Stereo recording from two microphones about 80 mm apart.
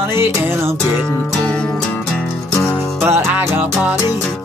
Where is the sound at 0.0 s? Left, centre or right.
Right.